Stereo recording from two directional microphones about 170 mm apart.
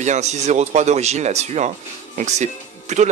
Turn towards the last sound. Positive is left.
turn(degrees=-40)  # may be behind; listen again after turning